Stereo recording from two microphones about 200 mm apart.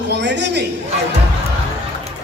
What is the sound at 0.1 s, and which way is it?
Speech, 60° right (ahead or behind).